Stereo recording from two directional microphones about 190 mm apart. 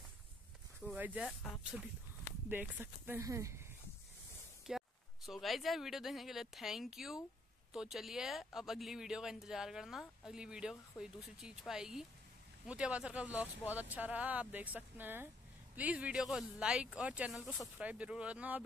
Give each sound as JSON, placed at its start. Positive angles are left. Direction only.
{"t": 0.7, "sound": "speech", "side_deg": -10}
{"t": 4.6, "sound": "speech", "side_deg": 0}